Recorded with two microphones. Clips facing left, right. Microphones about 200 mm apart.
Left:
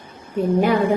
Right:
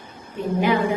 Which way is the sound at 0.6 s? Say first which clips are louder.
Left 1 dB; 40° left (ahead or behind).